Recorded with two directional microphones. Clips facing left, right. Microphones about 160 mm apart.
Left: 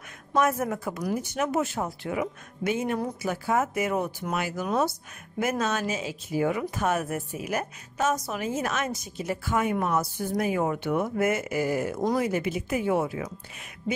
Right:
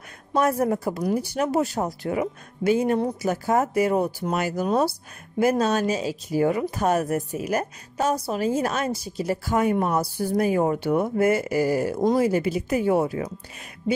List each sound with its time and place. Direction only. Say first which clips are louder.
0.3 s speech: right 3 dB; 35° right (ahead or behind)